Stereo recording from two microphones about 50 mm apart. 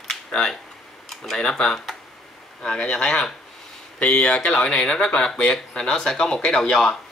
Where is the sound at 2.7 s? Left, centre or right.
Left.